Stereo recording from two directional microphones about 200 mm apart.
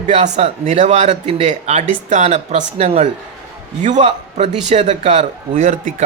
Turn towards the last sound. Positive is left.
turn(degrees=-40)  # may be behind; listen again after turning